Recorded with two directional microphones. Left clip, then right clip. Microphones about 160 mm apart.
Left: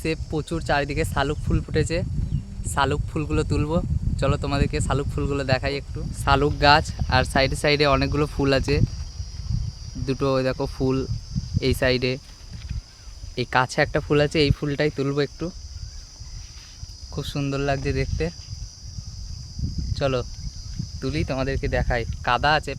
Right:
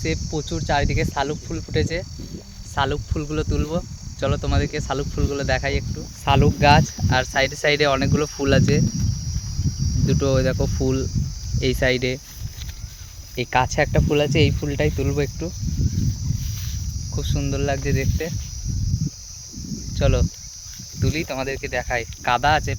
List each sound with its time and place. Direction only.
0.0 s speech: 25° left (ahead or behind)
10.1 s speech: 5° left (ahead or behind)
13.3 s speech: 10° left (ahead or behind)
17.2 s speech: 20° left (ahead or behind)
20.0 s speech: 10° left (ahead or behind)